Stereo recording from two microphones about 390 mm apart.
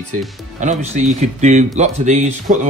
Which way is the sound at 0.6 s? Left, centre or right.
Centre.